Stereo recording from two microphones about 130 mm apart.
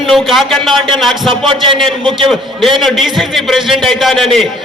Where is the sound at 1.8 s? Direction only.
Centre (ahead or behind).